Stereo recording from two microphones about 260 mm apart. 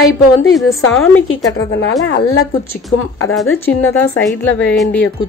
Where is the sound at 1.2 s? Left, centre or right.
Left.